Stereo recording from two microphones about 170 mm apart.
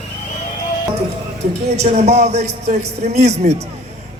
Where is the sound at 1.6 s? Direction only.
40° right (ahead or behind).